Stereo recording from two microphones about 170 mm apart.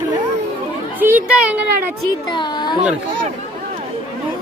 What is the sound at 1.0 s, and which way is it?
Speech, 10° right (ahead or behind).